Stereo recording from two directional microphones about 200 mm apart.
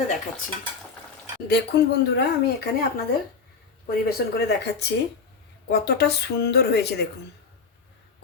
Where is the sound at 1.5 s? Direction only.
55° left (ahead or behind).